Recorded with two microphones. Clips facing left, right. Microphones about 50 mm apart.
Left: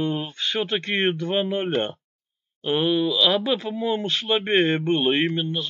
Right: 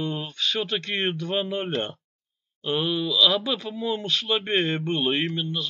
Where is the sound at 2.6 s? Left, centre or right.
Centre.